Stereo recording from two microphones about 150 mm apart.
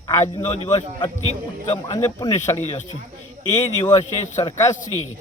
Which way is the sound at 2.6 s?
50° left (ahead or behind).